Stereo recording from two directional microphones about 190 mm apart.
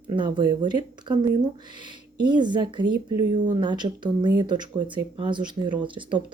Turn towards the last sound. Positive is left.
turn(degrees=-25)  # may be behind; listen again after turning